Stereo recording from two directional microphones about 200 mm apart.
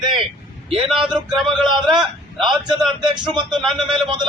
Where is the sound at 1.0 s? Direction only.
Centre (ahead or behind).